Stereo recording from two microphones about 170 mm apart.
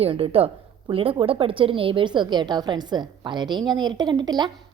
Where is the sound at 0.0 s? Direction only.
35° right (ahead or behind).